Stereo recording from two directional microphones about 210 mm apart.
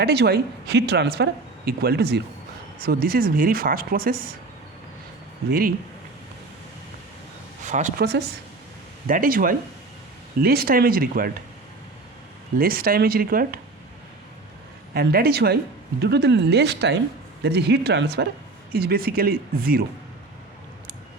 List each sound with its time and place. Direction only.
0.0 s speech: 50° right (ahead or behind)
5.5 s speech: 45° right (ahead or behind)
7.6 s speech: 35° right (ahead or behind)
12.5 s speech: 45° right (ahead or behind)
14.9 s speech: 45° right (ahead or behind)